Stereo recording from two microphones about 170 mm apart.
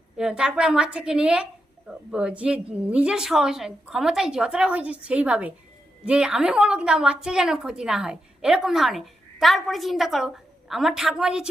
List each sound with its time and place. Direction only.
0.2 s a woman's voice: 5° right (ahead or behind)